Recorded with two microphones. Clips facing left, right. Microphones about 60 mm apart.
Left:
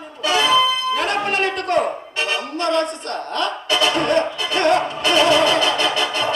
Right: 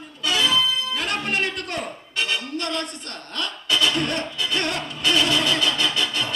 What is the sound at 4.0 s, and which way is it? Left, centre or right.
Music, left.